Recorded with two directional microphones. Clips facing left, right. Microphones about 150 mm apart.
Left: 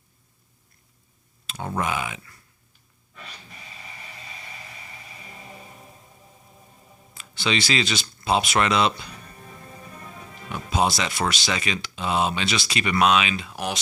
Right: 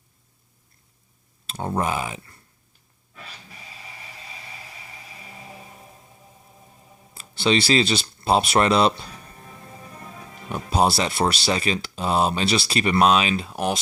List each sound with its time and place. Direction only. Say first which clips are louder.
1.5 s speech: right 2 dB; 30° right (ahead or behind)
5.2 s a sound: right 2 dB; 5° right (ahead or behind)
7.1 s speech: right 5 dB; 30° right (ahead or behind)
10.2 s music: right 1 dB; centre (ahead or behind)
10.5 s speech: right 3 dB; 35° right (ahead or behind)